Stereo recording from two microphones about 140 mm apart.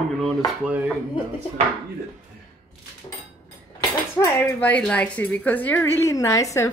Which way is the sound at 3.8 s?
25° left (ahead or behind).